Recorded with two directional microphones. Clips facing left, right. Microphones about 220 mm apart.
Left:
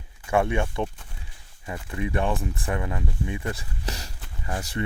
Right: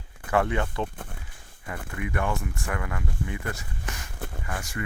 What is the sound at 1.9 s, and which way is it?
Speech, 25° left (ahead or behind).